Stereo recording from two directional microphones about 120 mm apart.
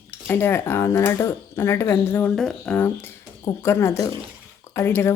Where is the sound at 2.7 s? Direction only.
15° left (ahead or behind).